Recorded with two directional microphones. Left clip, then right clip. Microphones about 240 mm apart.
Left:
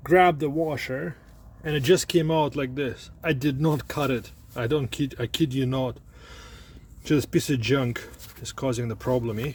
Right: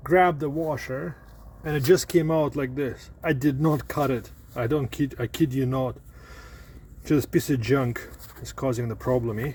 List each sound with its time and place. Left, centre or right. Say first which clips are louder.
0.1 s speech: left 1 dB; centre
1.7 s speech: right 1 dB; centre